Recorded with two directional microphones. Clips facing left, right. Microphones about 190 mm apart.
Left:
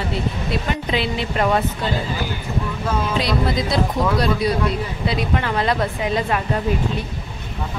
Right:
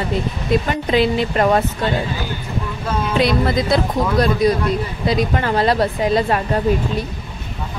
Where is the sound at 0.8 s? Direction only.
45° right (ahead or behind).